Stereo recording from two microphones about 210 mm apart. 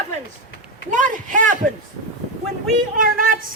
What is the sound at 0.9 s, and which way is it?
Speech, 40° right (ahead or behind).